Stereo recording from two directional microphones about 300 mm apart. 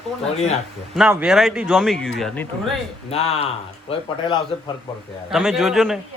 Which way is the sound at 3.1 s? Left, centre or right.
Left.